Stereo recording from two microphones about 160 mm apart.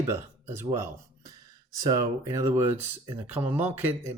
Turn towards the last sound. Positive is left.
turn(degrees=-15)  # may be behind; listen again after turning